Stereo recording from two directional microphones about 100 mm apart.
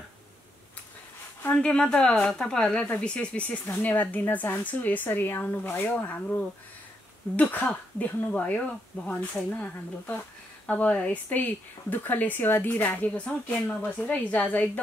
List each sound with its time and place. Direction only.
1.5 s speech: 10° left (ahead or behind)